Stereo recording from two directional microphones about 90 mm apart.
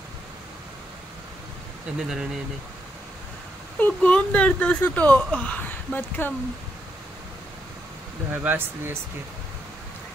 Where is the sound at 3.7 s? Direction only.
15° left (ahead or behind).